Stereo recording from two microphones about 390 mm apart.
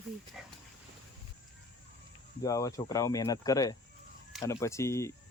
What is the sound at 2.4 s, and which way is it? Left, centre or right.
Speech, centre.